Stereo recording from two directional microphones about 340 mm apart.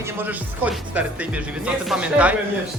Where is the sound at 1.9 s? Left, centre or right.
Centre.